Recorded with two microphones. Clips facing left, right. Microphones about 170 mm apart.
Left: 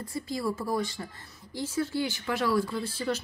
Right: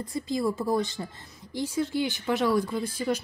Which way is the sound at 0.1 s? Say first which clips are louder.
Right 4 dB; 20° right (ahead or behind).